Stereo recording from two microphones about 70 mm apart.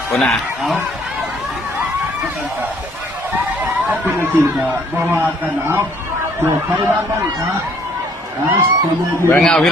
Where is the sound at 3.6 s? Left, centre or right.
Right.